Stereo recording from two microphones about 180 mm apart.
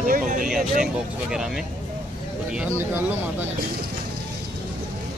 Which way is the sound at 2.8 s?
15° right (ahead or behind).